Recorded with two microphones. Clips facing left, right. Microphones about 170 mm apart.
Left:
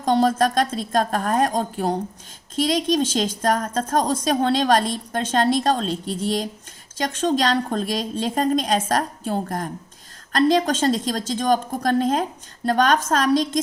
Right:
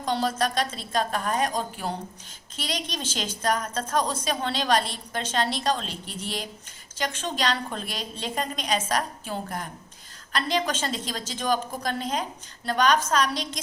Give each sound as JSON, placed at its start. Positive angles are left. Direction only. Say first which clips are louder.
{"t": 0.0, "sound": "a woman's voice", "louder": "left 7 dB", "side_deg": 45}